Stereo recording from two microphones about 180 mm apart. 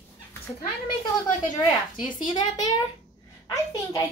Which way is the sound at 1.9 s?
25° left (ahead or behind).